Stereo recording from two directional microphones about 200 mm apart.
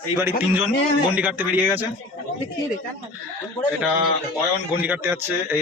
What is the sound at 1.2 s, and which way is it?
Speech, 10° right (ahead or behind).